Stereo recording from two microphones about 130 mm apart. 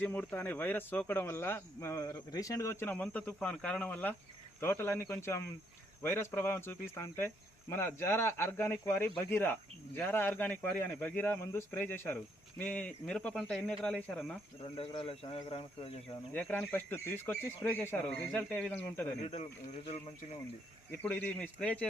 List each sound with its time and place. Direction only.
0.0 s speech: 15° left (ahead or behind)
2.9 s speech: 10° left (ahead or behind)
14.6 s speech: 45° left (ahead or behind)
16.3 s speech: 10° left (ahead or behind)
19.2 s speech: 55° left (ahead or behind)
21.0 s speech: 10° left (ahead or behind)